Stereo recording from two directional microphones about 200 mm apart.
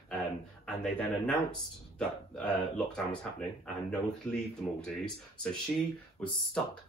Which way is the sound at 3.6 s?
5° left (ahead or behind).